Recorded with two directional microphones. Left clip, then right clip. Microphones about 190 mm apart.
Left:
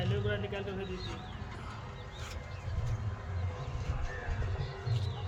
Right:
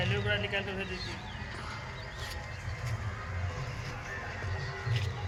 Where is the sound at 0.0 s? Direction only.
55° left (ahead or behind).